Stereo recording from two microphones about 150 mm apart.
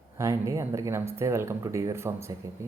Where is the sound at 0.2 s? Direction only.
20° right (ahead or behind).